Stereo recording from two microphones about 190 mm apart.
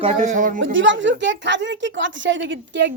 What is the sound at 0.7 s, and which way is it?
A woman's voice, 80° right.